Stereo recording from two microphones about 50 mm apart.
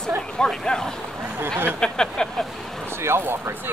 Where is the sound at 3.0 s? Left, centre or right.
Right.